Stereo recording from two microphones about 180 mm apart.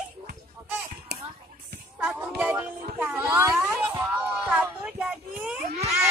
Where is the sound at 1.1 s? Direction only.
65° right (ahead or behind).